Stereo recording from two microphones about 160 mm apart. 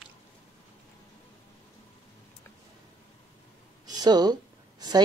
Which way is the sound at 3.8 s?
25° right (ahead or behind).